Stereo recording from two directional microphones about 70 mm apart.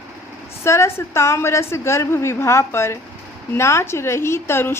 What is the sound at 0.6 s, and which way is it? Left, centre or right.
A woman's voice, left.